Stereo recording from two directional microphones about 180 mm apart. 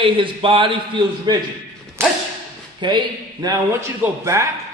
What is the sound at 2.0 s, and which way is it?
Thump, 15° right (ahead or behind).